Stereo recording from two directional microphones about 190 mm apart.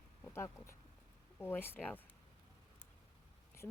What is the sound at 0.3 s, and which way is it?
A woman's voice, 15° left (ahead or behind).